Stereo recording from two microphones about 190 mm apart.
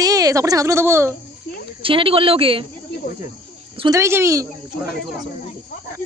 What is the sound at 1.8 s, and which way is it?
Speech, 30° right (ahead or behind).